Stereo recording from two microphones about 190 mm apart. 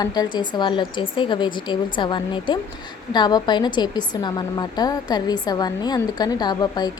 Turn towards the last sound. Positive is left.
turn(degrees=20)  # may be behind; listen again after turning